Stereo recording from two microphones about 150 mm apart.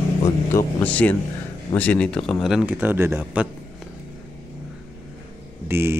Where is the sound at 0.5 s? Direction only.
10° left (ahead or behind); by 3.5 s 10° right (ahead or behind).